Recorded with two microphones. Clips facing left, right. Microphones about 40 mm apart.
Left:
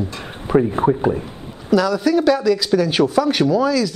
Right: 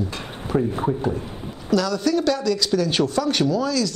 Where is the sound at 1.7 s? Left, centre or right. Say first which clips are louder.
Left 4 dB; centre.